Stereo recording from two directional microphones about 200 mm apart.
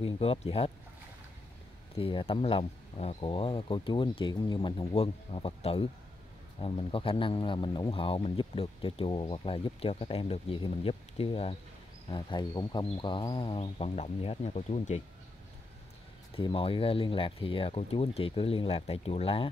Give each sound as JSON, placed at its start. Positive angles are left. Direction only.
{"t": 0.0, "sound": "speech", "side_deg": 30}
{"t": 2.0, "sound": "speech", "side_deg": 25}
{"t": 16.3, "sound": "speech", "side_deg": 30}